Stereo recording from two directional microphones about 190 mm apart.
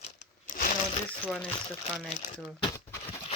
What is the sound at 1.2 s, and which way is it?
Speech, centre (ahead or behind).